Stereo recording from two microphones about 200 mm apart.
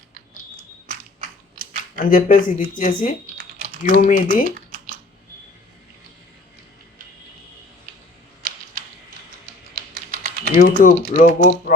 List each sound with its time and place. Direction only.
2.0 s speech: 40° left (ahead or behind)
4.5 s a sound: 45° right (ahead or behind)
8.4 s arrow: 45° right (ahead or behind)
9.7 s typing: 45° right (ahead or behind)
10.5 s speech: 40° left (ahead or behind)